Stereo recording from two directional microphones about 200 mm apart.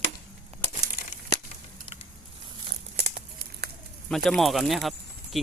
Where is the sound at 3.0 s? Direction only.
50° right (ahead or behind).